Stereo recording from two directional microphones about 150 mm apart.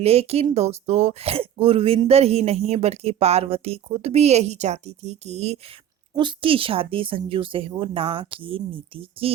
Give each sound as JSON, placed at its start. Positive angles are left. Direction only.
{"t": 0.0, "sound": "a woman's voice", "side_deg": -45}
{"t": 6.1, "sound": "speech", "side_deg": -35}